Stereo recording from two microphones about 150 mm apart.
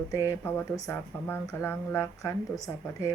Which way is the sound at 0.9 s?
15° left (ahead or behind).